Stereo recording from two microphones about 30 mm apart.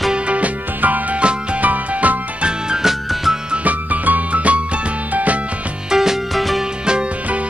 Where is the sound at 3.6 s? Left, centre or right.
Right.